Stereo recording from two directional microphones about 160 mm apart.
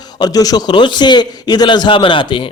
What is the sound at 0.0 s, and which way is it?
A man's voice, 25° left (ahead or behind).